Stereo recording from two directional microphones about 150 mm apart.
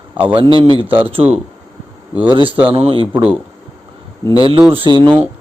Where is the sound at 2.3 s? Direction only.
35° right (ahead or behind).